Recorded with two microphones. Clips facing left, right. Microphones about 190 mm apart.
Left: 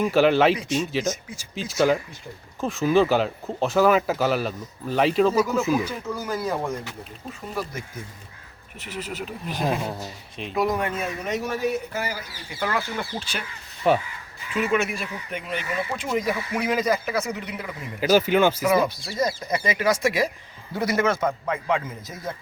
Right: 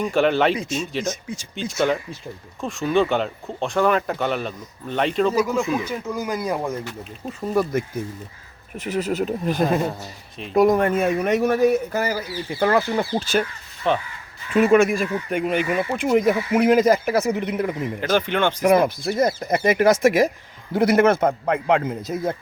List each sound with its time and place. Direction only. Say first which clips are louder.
0.0 s speech: left 1 dB; centre (ahead or behind)
5.3 s speech: right 1 dB; 10° right (ahead or behind)
5.5 s speech: even; 5° left (ahead or behind)
6.1 s speech: right 3 dB; 10° right (ahead or behind)
7.5 s a man's voice: right 11 dB; 55° right (ahead or behind)
13.8 s speech: left 1 dB; 10° left (ahead or behind)
14.5 s speech: right 8 dB; 45° right (ahead or behind)
18.0 s speech: left 3 dB; 5° left (ahead or behind)
18.7 s speech: right 4 dB; 50° right (ahead or behind)
20.8 s a man's voice: right 6 dB; 60° right (ahead or behind)